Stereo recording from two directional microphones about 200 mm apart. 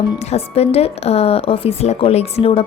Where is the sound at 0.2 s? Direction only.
30° left (ahead or behind).